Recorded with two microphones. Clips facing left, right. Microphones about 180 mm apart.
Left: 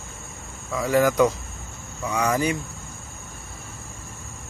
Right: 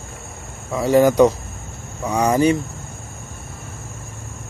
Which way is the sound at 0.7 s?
30° right (ahead or behind).